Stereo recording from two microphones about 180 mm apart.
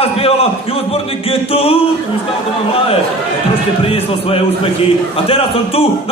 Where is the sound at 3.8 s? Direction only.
30° left (ahead or behind).